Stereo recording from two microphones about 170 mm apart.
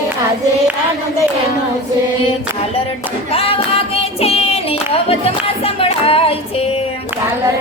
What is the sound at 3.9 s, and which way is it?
Child singing, 35° left (ahead or behind).